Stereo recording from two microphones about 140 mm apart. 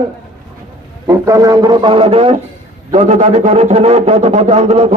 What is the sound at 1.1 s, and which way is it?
A man's voice, 25° right (ahead or behind).